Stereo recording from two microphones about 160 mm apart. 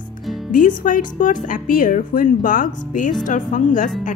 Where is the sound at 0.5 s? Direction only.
55° left (ahead or behind).